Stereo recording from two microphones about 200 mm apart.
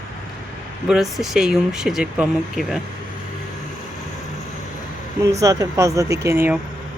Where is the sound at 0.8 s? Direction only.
Centre (ahead or behind).